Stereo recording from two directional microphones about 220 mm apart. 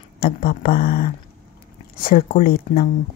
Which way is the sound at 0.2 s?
40° left (ahead or behind).